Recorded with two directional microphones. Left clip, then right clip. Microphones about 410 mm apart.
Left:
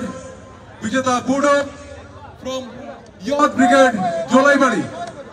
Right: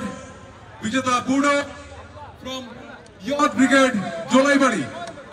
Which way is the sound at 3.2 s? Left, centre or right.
Left.